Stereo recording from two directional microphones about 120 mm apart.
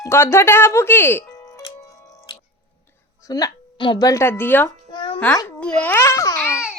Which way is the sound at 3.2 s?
30° left (ahead or behind).